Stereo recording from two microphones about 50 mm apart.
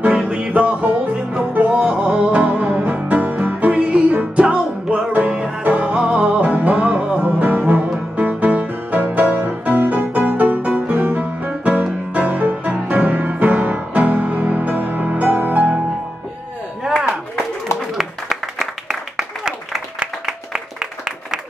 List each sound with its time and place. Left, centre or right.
0.0 s music: right
17.7 s applause: centre
20.2 s applause: centre